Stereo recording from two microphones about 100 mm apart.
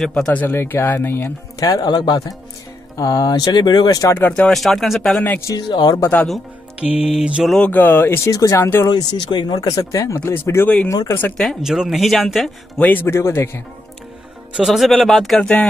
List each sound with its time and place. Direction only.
0.0 s speech: 5° left (ahead or behind)
0.4 s speech: 20° left (ahead or behind)
1.7 s speech: 40° left (ahead or behind)
4.3 s speech: 5° left (ahead or behind)
5.4 s speech: 35° left (ahead or behind)
5.7 s speech: 50° left (ahead or behind)
7.0 s mantra: 10° right (ahead or behind)
7.6 s speech: 20° left (ahead or behind)
8.3 s speech: 35° left (ahead or behind)
8.8 s speech: 45° left (ahead or behind); by 11.1 s 30° left (ahead or behind)
11.3 s speech: centre (ahead or behind)
12.7 s speech: 15° left (ahead or behind)
14.6 s speech: centre (ahead or behind)